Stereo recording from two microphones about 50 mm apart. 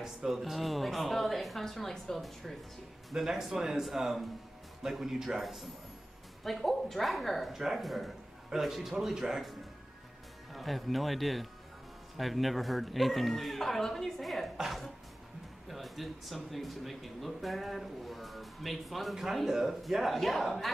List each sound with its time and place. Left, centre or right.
0.0 s speech: centre